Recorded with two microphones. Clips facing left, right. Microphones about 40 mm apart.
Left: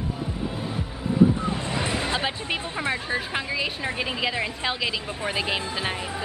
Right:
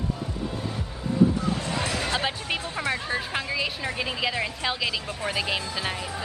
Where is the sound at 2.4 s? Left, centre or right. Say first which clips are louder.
Left 1 dB; centre.